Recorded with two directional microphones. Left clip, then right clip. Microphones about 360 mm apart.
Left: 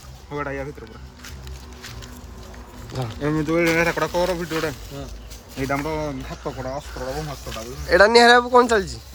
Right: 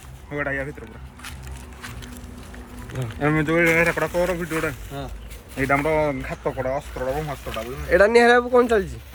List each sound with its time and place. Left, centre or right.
0.3 s speech: centre
2.9 s speech: centre
3.7 s speech: centre
5.5 s speech: centre